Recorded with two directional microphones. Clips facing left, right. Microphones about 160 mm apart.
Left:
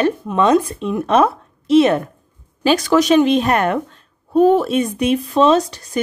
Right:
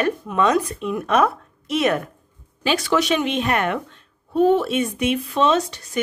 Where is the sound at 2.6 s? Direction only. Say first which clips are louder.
Left 6 dB; 40° left (ahead or behind).